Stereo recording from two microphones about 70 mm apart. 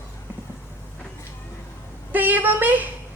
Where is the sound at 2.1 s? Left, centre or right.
Right.